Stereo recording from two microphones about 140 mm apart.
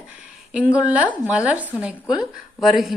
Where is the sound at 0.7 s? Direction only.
10° right (ahead or behind).